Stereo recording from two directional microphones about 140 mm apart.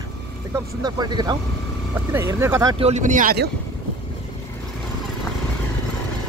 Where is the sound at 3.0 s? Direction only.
70° right (ahead or behind).